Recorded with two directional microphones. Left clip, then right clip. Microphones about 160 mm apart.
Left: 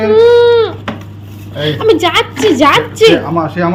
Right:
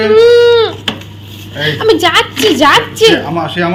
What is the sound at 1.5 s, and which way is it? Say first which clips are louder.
A woman's voice: even; 10° left (ahead or behind).